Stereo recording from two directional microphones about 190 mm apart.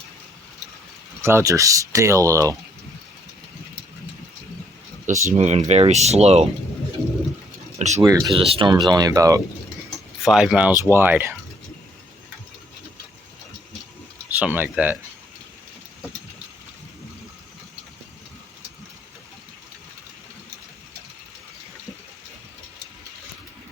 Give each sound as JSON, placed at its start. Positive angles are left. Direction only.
{"t": 1.2, "sound": "speech", "side_deg": -15}
{"t": 5.0, "sound": "speech", "side_deg": -40}
{"t": 7.8, "sound": "a sound", "side_deg": -35}
{"t": 8.0, "sound": "speech", "side_deg": -20}
{"t": 10.2, "sound": "speech", "side_deg": -5}
{"t": 14.3, "sound": "speech", "side_deg": -10}